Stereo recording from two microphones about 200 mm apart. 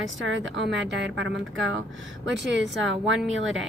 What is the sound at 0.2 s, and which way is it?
Speech, 65° right (ahead or behind).